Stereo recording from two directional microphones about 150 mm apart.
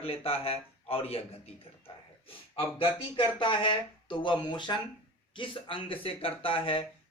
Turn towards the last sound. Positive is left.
turn(degrees=35)  # may be behind; listen again after turning